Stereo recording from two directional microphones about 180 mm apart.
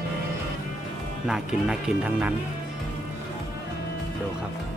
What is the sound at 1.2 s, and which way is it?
Speech, 5° right (ahead or behind).